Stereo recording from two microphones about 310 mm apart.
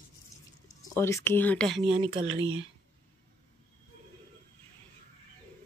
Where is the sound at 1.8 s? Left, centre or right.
Centre.